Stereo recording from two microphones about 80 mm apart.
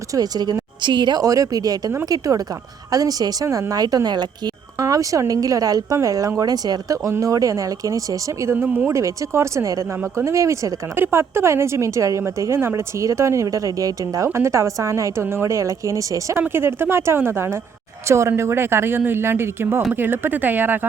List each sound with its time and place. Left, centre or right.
0.1 s a woman's voice: right
0.8 s speech: right
1.2 s speech: right
4.8 s speech: right
8.5 s speech: right
8.9 s a woman's voice: right
10.9 s a woman's voice: right
14.3 s a woman's voice: right
16.5 s a woman's voice: right